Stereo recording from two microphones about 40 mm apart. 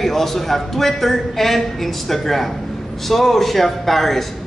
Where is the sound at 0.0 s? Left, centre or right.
Centre.